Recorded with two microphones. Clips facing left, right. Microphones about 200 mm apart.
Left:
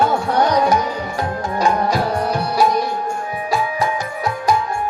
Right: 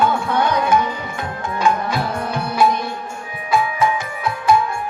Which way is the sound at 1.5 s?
40° left (ahead or behind).